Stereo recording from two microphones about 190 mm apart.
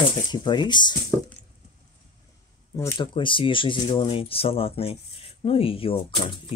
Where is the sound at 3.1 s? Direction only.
25° left (ahead or behind).